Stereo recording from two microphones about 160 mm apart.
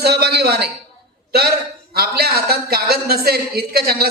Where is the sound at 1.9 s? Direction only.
75° right (ahead or behind).